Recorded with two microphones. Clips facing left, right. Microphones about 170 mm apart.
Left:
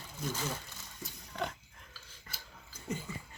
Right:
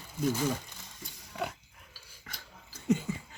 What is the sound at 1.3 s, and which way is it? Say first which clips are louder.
Speech: right 2 dB; 5° right (ahead or behind).